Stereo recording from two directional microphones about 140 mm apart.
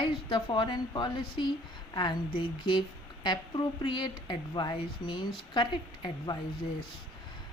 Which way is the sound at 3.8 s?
35° left (ahead or behind).